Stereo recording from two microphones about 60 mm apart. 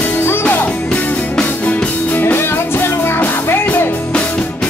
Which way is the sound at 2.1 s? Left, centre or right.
Left.